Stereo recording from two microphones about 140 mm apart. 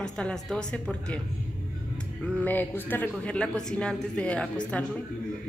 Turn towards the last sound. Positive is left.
turn(degrees=10)  # may be behind; listen again after turning